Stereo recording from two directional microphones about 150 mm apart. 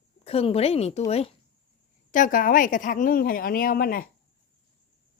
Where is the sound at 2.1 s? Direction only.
65° left (ahead or behind); by 4.0 s 85° left.